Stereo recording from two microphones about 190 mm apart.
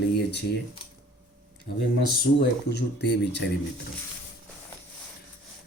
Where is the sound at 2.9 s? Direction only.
60° left (ahead or behind).